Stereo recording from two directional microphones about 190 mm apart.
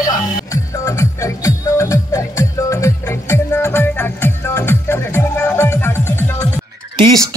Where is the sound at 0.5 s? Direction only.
15° left (ahead or behind).